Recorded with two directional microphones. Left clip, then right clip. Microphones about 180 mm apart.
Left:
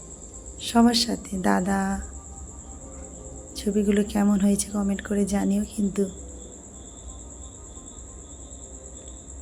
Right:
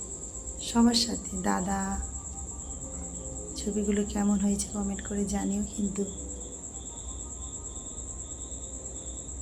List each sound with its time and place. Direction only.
0.6 s speech: 30° left (ahead or behind)
3.5 s speech: 30° left (ahead or behind)